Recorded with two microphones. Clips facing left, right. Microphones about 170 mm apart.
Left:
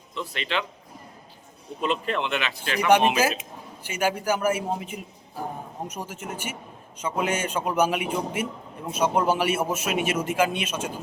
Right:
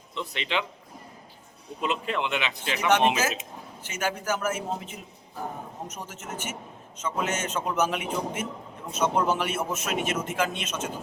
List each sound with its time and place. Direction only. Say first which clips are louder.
0.1 s a man's voice: left 1 dB; 20° right (ahead or behind)
1.8 s speech: left 2 dB; 10° right (ahead or behind)
2.8 s a man's voice: left 3 dB; 10° left (ahead or behind)
6.1 s a man's voice: left 2 dB; 10° left (ahead or behind)